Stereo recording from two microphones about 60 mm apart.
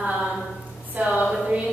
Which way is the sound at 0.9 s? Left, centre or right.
Right.